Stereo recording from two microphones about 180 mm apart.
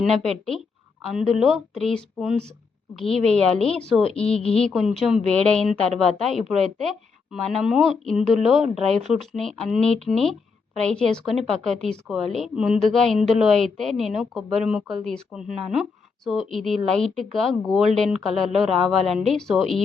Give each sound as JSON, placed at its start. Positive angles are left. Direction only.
{"t": 1.0, "sound": "a woman's voice", "side_deg": 0}
{"t": 3.3, "sound": "a woman's voice", "side_deg": 5}
{"t": 4.1, "sound": "a woman's voice", "side_deg": 35}
{"t": 4.7, "sound": "a woman's voice", "side_deg": 0}